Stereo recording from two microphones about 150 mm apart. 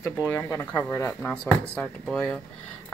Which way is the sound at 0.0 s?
15° left (ahead or behind).